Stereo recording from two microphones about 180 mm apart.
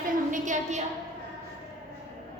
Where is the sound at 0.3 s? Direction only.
45° right (ahead or behind).